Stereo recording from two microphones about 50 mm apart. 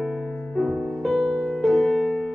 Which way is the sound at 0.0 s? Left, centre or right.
Centre.